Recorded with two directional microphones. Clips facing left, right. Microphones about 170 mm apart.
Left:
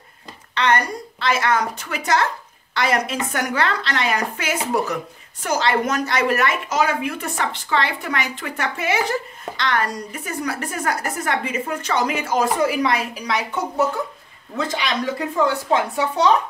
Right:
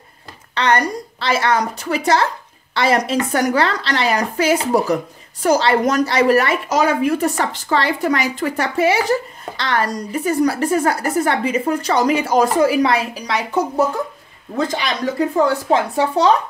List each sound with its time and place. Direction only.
0.6 s a woman's voice: 35° right (ahead or behind)